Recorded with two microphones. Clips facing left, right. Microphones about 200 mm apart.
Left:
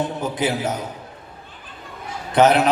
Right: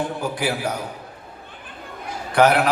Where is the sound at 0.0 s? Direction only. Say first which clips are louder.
Left 2 dB; 20° left (ahead or behind).